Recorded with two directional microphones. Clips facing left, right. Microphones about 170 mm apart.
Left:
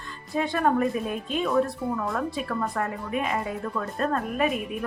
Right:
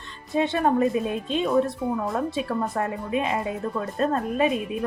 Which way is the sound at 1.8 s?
Centre (ahead or behind).